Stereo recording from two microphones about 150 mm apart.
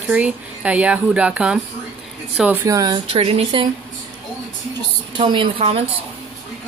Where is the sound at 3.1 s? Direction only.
40° right (ahead or behind).